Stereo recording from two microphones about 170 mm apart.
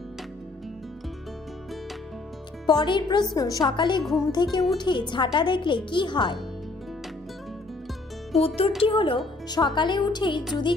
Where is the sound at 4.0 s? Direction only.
Centre (ahead or behind).